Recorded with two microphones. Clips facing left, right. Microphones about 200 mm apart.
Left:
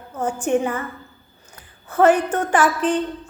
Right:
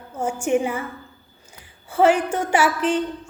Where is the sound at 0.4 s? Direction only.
10° right (ahead or behind).